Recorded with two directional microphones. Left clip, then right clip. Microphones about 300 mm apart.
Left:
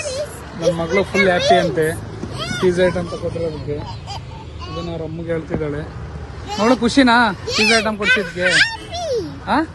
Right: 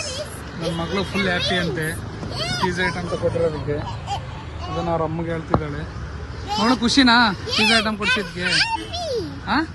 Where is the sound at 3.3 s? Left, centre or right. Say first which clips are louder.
Right 2 dB; centre.